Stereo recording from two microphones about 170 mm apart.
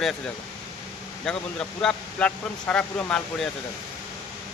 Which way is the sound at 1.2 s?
5° left (ahead or behind).